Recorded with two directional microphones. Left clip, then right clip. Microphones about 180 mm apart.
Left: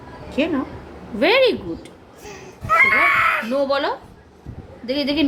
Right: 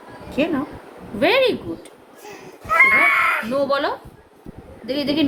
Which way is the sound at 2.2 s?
15° right (ahead or behind).